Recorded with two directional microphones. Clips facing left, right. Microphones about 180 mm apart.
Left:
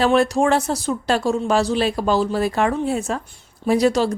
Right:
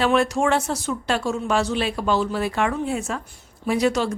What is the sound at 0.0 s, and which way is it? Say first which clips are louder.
Speech: left 3 dB; 35° left (ahead or behind).